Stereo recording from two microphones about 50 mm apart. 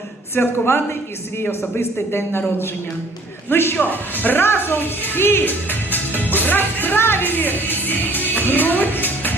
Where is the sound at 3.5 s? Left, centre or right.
Left.